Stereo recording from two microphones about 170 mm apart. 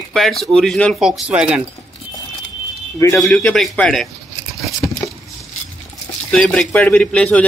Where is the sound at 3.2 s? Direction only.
5° left (ahead or behind).